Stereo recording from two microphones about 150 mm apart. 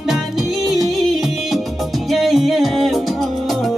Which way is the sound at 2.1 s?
Centre (ahead or behind).